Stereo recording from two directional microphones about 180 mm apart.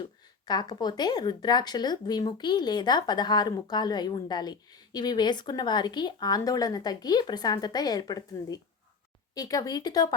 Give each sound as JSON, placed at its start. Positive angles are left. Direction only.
{"t": 0.4, "sound": "speech", "side_deg": 25}